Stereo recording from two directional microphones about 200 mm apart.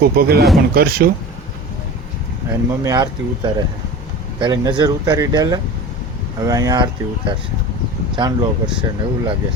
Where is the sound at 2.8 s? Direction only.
20° right (ahead or behind).